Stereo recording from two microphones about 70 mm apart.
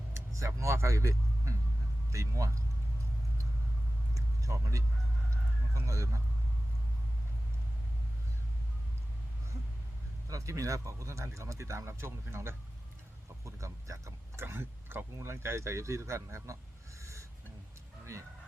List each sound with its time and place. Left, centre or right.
0.3 s a man's voice: right
4.1 s vehicle: right
5.7 s speech: right
10.2 s speech: right
13.4 s a sound: right
14.4 s speech: right
17.0 s a sound: right
18.0 s speech: right